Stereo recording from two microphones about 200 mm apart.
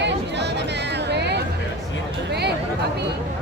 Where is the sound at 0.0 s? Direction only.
60° right (ahead or behind).